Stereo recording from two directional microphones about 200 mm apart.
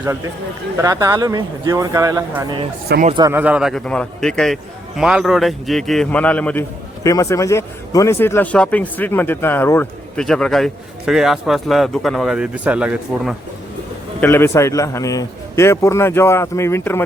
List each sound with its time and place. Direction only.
0.8 s speech: 15° right (ahead or behind)
3.3 s a man's voice: 5° right (ahead or behind)
14.2 s a man's voice: 10° left (ahead or behind)